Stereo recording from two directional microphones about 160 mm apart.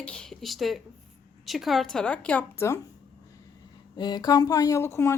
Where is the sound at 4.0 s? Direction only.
25° left (ahead or behind).